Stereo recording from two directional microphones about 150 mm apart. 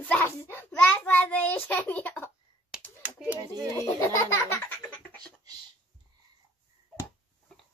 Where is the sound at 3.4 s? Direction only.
25° right (ahead or behind).